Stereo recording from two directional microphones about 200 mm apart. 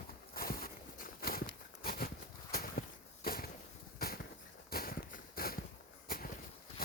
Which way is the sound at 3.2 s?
45° left (ahead or behind).